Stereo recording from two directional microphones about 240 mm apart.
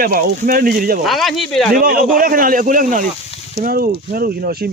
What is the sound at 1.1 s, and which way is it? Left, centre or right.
Speech, centre.